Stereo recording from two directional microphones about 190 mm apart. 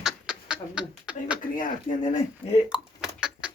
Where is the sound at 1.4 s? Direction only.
45° left (ahead or behind).